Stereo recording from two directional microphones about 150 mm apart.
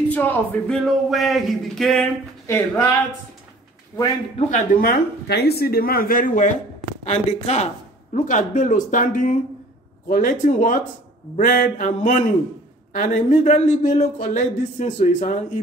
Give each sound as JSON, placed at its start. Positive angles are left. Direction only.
{"t": 0.1, "sound": "speech", "side_deg": 10}
{"t": 2.4, "sound": "speech", "side_deg": 15}
{"t": 4.5, "sound": "speech", "side_deg": 65}
{"t": 7.1, "sound": "speech", "side_deg": 45}